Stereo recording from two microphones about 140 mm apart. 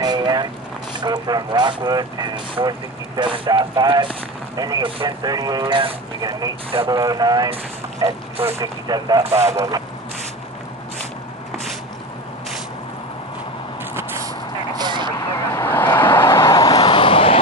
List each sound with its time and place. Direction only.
0.0 s vehicle: 30° right (ahead or behind)
1.0 s speech: 30° right (ahead or behind)
8.0 s speech: 45° right (ahead or behind)
8.5 s speech: 30° right (ahead or behind)
13.9 s vehicle: 20° right (ahead or behind)
14.8 s vehicle: 35° right (ahead or behind)
15.1 s vehicle: 20° left (ahead or behind)
16.7 s vehicle: 40° left (ahead or behind)